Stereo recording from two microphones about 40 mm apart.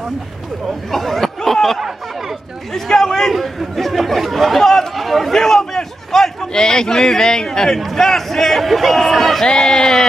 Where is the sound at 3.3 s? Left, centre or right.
Centre.